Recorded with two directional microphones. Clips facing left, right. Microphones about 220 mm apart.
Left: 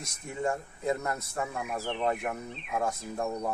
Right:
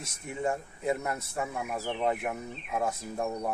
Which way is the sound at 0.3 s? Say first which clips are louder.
Even; 15° right (ahead or behind).